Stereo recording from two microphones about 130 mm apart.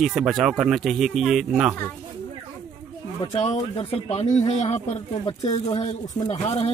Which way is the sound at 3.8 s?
50° left (ahead or behind).